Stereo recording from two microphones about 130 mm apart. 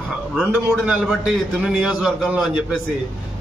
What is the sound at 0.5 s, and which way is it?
A man's voice, 10° right (ahead or behind).